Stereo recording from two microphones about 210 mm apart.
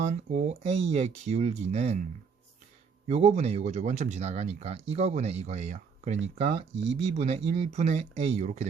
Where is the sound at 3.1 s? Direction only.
30° right (ahead or behind).